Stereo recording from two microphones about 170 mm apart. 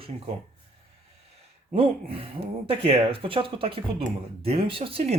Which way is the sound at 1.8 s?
35° right (ahead or behind).